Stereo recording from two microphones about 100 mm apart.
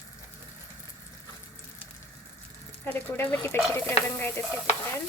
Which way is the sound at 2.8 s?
20° left (ahead or behind).